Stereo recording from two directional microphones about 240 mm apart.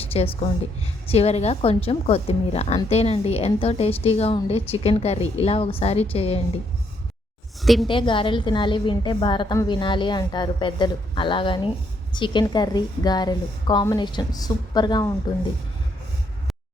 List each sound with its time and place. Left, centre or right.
0.1 s a woman's voice: left
7.6 s a woman's voice: centre
7.9 s a woman's voice: left